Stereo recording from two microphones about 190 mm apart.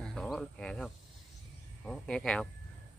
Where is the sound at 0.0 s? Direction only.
5° left (ahead or behind).